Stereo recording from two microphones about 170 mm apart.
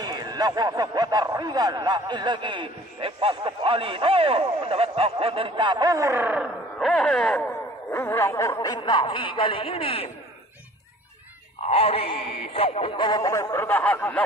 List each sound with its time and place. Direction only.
0.0 s speech: 25° right (ahead or behind)
6.8 s speech: centre (ahead or behind)
7.9 s speech: 15° left (ahead or behind); by 10.1 s 35° left (ahead or behind)
11.6 s speech: 35° left (ahead or behind); by 14.2 s 10° left (ahead or behind)